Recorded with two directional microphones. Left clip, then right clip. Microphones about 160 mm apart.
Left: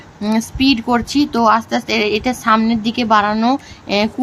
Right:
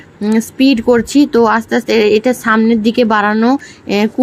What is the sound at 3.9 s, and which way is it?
Speech, 20° right (ahead or behind).